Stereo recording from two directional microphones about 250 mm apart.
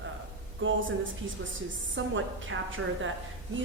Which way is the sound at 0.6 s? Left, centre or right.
Right.